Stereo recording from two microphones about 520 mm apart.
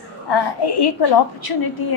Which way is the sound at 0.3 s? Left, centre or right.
Left.